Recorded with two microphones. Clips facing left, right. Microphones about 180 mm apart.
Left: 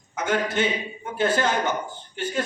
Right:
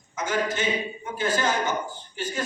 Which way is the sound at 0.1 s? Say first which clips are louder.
Left 2 dB; 60° left (ahead or behind).